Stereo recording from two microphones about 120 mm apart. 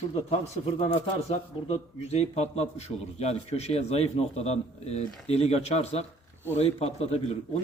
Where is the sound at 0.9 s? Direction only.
50° left (ahead or behind).